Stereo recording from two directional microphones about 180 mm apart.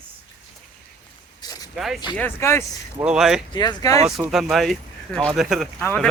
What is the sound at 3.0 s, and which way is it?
Speech, 5° right (ahead or behind).